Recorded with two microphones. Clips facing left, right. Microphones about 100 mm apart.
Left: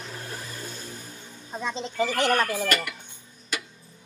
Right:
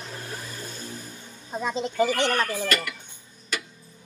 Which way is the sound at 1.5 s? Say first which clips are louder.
Right 4 dB; 10° right (ahead or behind).